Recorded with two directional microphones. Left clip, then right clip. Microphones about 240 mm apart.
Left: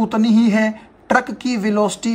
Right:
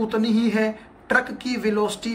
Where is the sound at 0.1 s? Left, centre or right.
Left.